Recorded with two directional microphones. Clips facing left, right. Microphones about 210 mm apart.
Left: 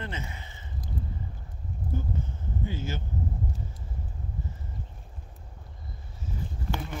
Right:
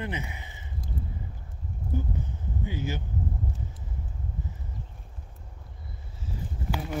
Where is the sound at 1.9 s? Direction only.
15° right (ahead or behind).